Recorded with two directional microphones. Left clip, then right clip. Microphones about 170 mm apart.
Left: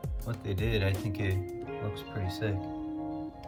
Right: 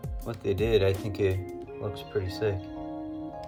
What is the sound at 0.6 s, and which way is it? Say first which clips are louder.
Speech: right 8 dB; 40° right (ahead or behind).